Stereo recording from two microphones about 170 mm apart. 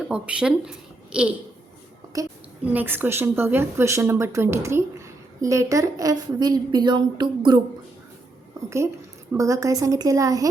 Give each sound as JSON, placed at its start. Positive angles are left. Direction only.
{"t": 0.1, "sound": "speech", "side_deg": -5}
{"t": 2.1, "sound": "a woman's voice", "side_deg": -20}
{"t": 9.4, "sound": "a woman's voice", "side_deg": -20}